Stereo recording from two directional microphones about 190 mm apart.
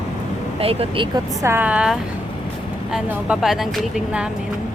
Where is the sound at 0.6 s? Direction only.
30° right (ahead or behind); by 4.3 s 5° right (ahead or behind).